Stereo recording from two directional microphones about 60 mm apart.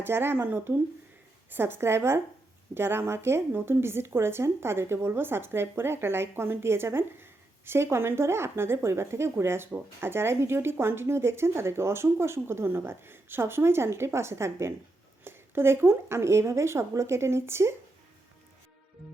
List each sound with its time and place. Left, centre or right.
0.0 s a woman's voice: right